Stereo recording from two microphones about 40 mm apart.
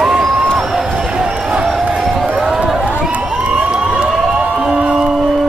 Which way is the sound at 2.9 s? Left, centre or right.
Right.